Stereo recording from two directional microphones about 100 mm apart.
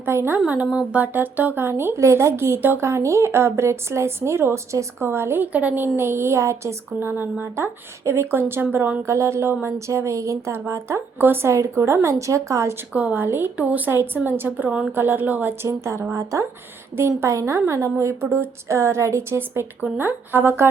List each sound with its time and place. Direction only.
0.0 s a woman's voice: 25° right (ahead or behind)
12.9 s speech: 15° right (ahead or behind)